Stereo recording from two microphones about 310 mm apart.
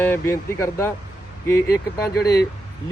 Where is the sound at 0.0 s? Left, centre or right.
Centre.